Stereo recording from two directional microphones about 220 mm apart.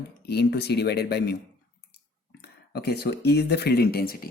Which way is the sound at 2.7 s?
45° left (ahead or behind).